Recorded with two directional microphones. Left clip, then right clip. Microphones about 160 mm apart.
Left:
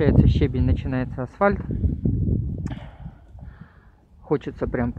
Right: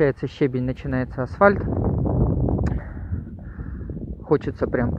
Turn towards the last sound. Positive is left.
turn(degrees=25)  # may be behind; listen again after turning